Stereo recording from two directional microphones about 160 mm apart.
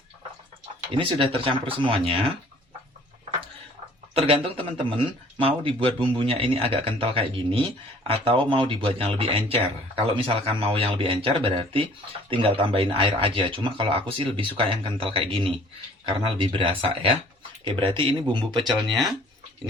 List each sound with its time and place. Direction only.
0.9 s speech: 35° right (ahead or behind)
4.1 s speech: 35° right (ahead or behind)
18.7 s speech: centre (ahead or behind)